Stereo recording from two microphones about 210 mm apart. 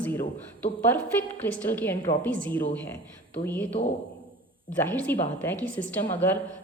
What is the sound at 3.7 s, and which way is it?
Speech, 40° left (ahead or behind).